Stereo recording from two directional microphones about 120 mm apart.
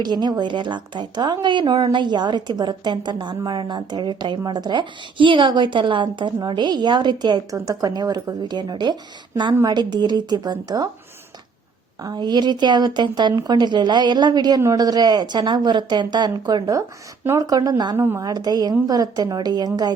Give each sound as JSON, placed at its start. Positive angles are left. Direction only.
{"t": 0.0, "sound": "a woman's voice", "side_deg": -35}
{"t": 12.0, "sound": "a woman's voice", "side_deg": -35}
{"t": 17.9, "sound": "a woman's voice", "side_deg": -20}
{"t": 18.2, "sound": "a woman's voice", "side_deg": -30}